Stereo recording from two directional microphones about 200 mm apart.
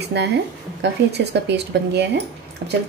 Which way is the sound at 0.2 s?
55° right (ahead or behind).